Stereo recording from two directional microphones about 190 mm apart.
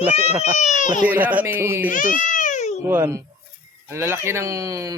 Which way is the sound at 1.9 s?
45° left (ahead or behind).